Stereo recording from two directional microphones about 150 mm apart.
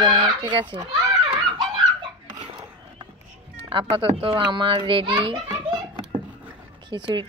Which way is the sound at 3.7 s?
35° right (ahead or behind).